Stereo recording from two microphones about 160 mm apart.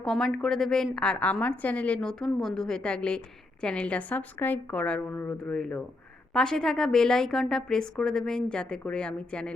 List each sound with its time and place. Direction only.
0.0 s a woman's voice: centre (ahead or behind)